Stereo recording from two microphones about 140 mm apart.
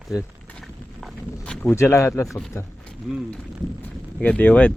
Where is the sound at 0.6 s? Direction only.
Centre (ahead or behind).